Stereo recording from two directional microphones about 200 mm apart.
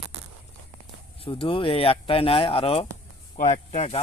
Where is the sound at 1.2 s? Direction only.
25° left (ahead or behind).